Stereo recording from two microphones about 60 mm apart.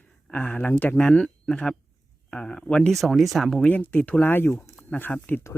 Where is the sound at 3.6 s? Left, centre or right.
Left.